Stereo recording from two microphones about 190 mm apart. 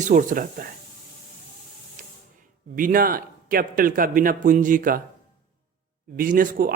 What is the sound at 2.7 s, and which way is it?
A man's voice, 45° right (ahead or behind).